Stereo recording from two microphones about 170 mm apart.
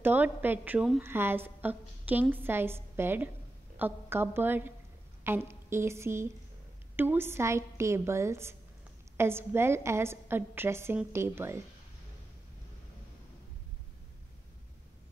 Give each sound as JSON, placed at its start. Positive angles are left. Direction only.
{"t": 0.0, "sound": "a woman's voice", "side_deg": -10}